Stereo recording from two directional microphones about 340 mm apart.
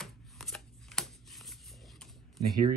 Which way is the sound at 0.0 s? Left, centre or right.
Centre.